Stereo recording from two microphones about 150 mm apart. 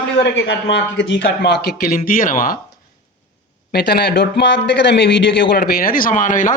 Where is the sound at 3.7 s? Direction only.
90° left.